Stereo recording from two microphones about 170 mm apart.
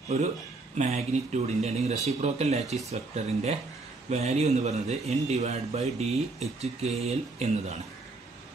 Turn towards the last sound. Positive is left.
turn(degrees=-40)  # may be behind; listen again after turning